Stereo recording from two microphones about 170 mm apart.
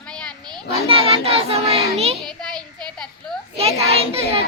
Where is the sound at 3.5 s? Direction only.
35° right (ahead or behind).